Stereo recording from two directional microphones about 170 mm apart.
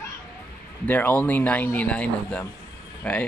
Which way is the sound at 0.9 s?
10° left (ahead or behind).